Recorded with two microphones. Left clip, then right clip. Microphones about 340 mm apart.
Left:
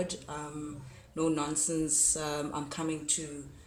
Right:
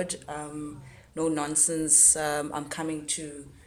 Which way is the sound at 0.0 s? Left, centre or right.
Centre.